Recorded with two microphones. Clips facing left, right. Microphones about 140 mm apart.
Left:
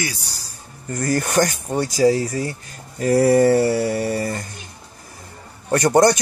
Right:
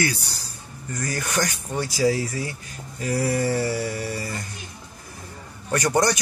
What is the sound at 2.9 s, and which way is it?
Speech, 60° left (ahead or behind).